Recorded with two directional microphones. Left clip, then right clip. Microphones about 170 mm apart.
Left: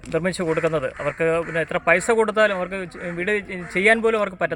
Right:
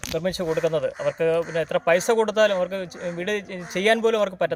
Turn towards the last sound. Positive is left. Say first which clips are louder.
# left 1 dB
turn(degrees=-15)  # may be behind; listen again after turning